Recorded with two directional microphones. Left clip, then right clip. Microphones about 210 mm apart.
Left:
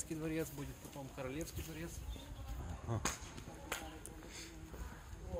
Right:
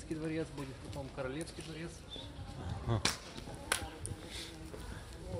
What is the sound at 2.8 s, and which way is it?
Speech, 15° right (ahead or behind).